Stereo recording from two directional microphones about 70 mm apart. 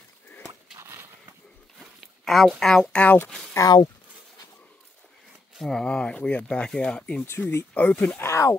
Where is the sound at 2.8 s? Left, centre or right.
Centre.